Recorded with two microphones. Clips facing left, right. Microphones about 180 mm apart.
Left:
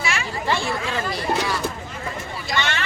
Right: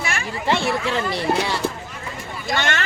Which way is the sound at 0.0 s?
50° right (ahead or behind).